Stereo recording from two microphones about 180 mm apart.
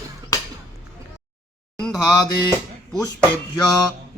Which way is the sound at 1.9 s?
20° left (ahead or behind).